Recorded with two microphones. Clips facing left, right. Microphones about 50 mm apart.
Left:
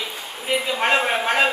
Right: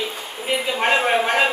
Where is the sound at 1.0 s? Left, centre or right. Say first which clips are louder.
Right 2 dB; centre.